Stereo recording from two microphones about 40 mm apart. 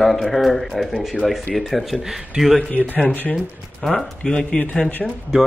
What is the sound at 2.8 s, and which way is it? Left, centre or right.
Speech, right.